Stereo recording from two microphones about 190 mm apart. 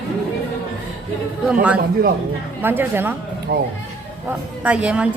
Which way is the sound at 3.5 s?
55° right (ahead or behind).